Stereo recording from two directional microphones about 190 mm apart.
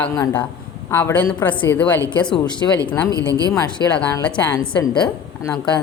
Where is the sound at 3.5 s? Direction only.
10° left (ahead or behind).